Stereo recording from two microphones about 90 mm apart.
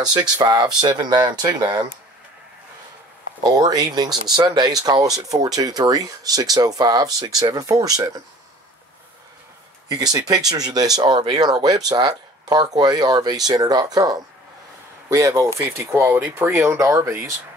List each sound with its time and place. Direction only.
0.1 s speech: 50° right (ahead or behind)
3.4 s speech: 45° right (ahead or behind)
9.8 s speech: 45° right (ahead or behind)